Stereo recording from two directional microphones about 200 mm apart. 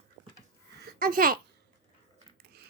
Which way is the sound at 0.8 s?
45° right (ahead or behind).